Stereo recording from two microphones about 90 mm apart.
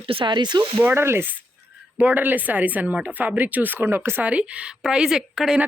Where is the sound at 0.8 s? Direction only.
25° right (ahead or behind); by 5.6 s 5° right (ahead or behind).